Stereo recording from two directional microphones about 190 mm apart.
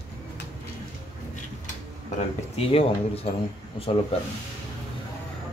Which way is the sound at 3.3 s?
35° left (ahead or behind).